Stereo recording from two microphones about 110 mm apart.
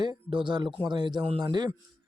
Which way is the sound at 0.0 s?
45° right (ahead or behind).